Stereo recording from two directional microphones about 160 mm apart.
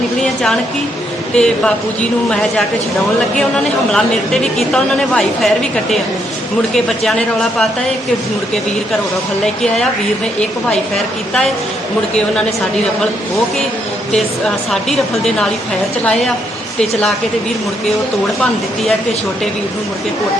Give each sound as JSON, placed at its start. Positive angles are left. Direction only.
{"t": 1.4, "sound": "a woman's voice", "side_deg": 5}
{"t": 3.9, "sound": "a woman's voice", "side_deg": 5}
{"t": 10.7, "sound": "a woman's voice", "side_deg": 5}
{"t": 14.1, "sound": "a woman's voice", "side_deg": 5}